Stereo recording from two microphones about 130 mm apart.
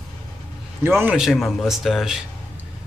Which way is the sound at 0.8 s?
15° right (ahead or behind).